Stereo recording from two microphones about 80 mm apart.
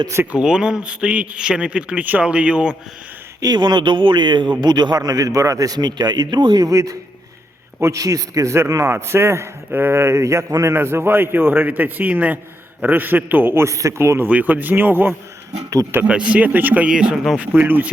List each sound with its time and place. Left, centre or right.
0.3 s a man's voice: centre
3.4 s speech: right
4.6 s a man's voice: right
6.7 s a man's voice: right
14.3 s a man's voice: centre
15.7 s a man's voice: right
16.0 s a man's voice: centre
16.9 s a man's voice: centre
17.4 s a man's voice: right